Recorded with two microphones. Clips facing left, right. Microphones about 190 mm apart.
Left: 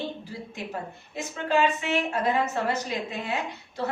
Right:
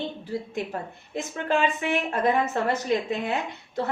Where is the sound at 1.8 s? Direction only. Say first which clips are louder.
Right 2 dB; 55° right (ahead or behind).